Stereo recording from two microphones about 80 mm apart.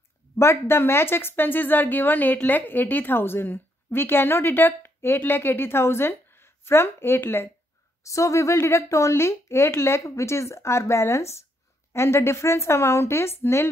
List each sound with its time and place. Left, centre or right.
0.4 s a woman's voice: left
8.0 s speech: left